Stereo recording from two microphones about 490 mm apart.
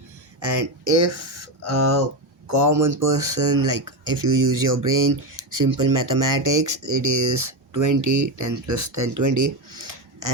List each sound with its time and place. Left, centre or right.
0.4 s speech: right